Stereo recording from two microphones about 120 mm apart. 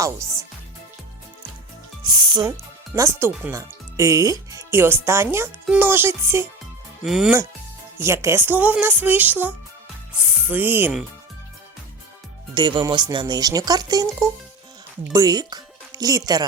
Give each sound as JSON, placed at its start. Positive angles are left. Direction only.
{"t": 0.0, "sound": "speech", "side_deg": -25}
{"t": 2.0, "sound": "speech", "side_deg": -40}
{"t": 2.9, "sound": "speech", "side_deg": -25}
{"t": 7.0, "sound": "speech", "side_deg": -5}
{"t": 7.9, "sound": "speech", "side_deg": -25}
{"t": 12.5, "sound": "speech", "side_deg": -40}